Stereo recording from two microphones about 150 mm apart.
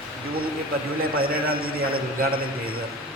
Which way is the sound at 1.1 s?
80° right.